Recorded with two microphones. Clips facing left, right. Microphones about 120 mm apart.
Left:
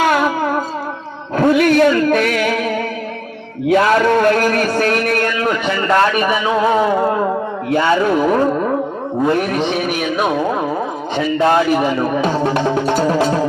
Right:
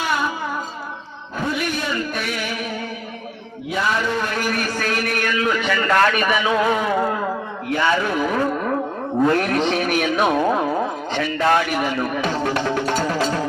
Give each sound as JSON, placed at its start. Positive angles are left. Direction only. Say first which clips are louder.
{"t": 0.0, "sound": "music", "louder": "left 8 dB", "side_deg": 90}
{"t": 3.7, "sound": "a man's voice", "louder": "left 10 dB", "side_deg": 65}
{"t": 5.5, "sound": "a man's voice", "louder": "left 2 dB", "side_deg": 30}
{"t": 9.2, "sound": "speech", "louder": "left 2 dB", "side_deg": 15}
{"t": 11.1, "sound": "a man's voice", "louder": "left 5 dB", "side_deg": 20}
{"t": 12.6, "sound": "a man's voice", "louder": "left 5 dB", "side_deg": 25}